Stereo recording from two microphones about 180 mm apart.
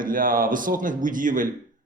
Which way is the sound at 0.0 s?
50° right (ahead or behind).